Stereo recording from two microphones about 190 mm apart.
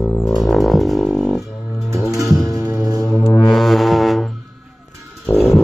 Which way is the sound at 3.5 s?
Centre (ahead or behind).